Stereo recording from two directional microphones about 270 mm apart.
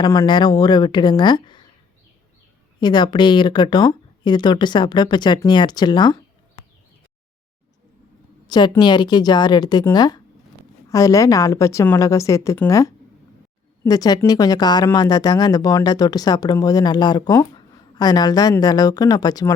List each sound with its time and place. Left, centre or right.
0.0 s speech: centre
2.8 s speech: centre
8.4 s speech: centre